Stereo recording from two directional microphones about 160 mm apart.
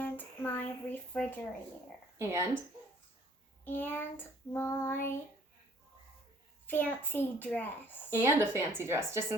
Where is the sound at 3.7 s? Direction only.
10° left (ahead or behind).